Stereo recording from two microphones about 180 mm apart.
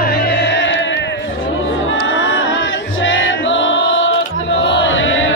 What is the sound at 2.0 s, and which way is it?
Music, 90° left.